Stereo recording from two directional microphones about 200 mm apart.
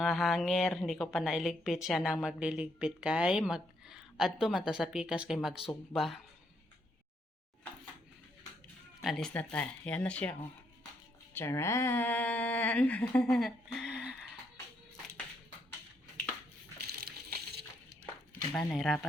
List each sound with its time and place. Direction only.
0.0 s a woman's voice: centre (ahead or behind)
9.0 s a woman's voice: centre (ahead or behind)
11.3 s a woman's voice: 10° left (ahead or behind); by 14.2 s 5° right (ahead or behind)
17.0 s water: 50° right (ahead or behind)
18.5 s a woman's voice: centre (ahead or behind)